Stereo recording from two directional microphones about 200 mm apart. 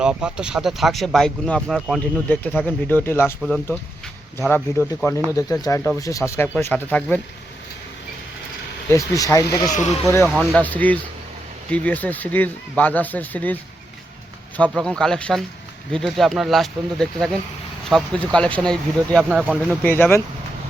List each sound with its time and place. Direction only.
0.0 s speech: 5° right (ahead or behind)
8.9 s speech: 15° left (ahead or behind)
14.7 s speech: 5° left (ahead or behind)
19.8 s speech: 10° left (ahead or behind)